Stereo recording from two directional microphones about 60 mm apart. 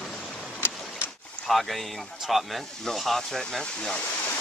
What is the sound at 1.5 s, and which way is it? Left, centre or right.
Speech, centre.